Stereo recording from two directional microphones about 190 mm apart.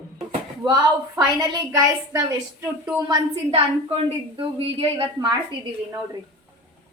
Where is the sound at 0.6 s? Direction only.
20° right (ahead or behind).